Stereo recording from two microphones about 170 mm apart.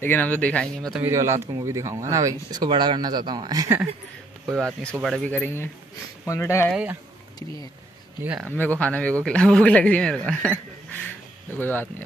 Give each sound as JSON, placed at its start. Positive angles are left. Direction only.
{"t": 0.0, "sound": "speech", "side_deg": 10}
{"t": 1.0, "sound": "speech", "side_deg": -15}
{"t": 5.0, "sound": "speech", "side_deg": 5}
{"t": 6.7, "sound": "speech", "side_deg": -5}
{"t": 8.2, "sound": "speech", "side_deg": -10}
{"t": 8.5, "sound": "speech", "side_deg": 10}